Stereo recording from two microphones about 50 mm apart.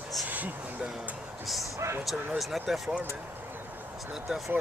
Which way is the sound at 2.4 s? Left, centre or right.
Centre.